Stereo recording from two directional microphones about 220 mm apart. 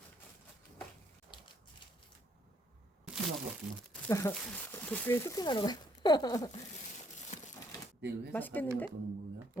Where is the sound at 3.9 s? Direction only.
15° left (ahead or behind).